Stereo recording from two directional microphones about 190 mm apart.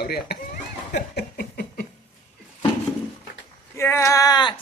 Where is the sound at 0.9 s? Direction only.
60° left (ahead or behind).